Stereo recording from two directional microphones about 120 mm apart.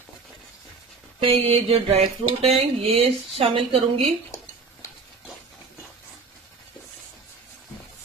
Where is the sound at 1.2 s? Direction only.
50° right (ahead or behind).